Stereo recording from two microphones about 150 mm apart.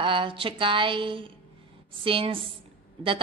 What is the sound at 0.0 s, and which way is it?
A woman's voice, 35° right (ahead or behind).